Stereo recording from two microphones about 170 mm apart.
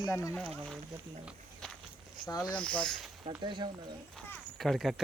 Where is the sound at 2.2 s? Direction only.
25° left (ahead or behind).